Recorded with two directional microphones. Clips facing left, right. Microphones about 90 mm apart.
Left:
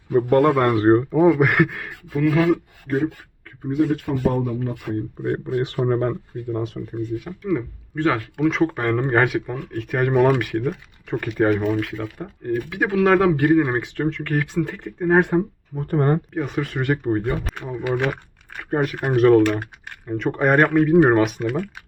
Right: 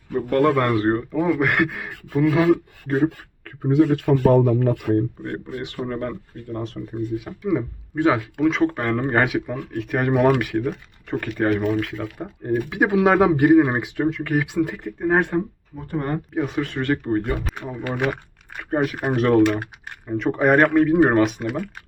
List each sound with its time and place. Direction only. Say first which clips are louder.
0.3 s a man's voice: even; 25° left (ahead or behind)
1.3 s speech: left 2 dB; 5° left (ahead or behind)
2.1 s speech: right 1 dB; 15° right (ahead or behind)
2.8 s speech: right 2 dB; 35° right (ahead or behind)
3.4 s speech: right 3 dB; 75° right (ahead or behind)
5.2 s speech: left 7 dB; 15° left (ahead or behind)
5.6 s a man's voice: left 5 dB; 35° left (ahead or behind)
6.5 s speech: left 3 dB; 5° left (ahead or behind)
7.3 s speech: right 1 dB; 10° right (ahead or behind)
12.7 s speech: even; 15° right (ahead or behind); by 15.3 s centre (ahead or behind)
15.9 s speech: left 6 dB; 45° left (ahead or behind)
16.3 s speech: right 1 dB; centre (ahead or behind)
16.7 s speech: left 1 dB; 10° left (ahead or behind)
17.4 s speech: left 2 dB; centre (ahead or behind)